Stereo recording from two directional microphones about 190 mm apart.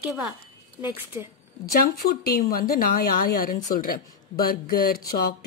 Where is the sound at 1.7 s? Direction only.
50° left (ahead or behind).